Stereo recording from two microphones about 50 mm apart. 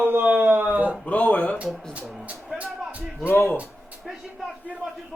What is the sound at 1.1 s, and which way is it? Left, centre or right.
Speech, left.